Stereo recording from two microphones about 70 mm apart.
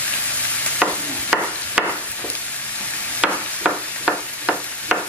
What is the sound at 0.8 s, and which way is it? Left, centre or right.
Stir, centre.